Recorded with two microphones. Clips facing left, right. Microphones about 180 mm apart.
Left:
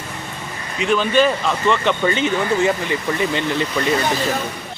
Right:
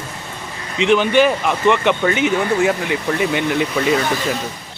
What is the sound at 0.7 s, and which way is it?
Speech, 20° right (ahead or behind).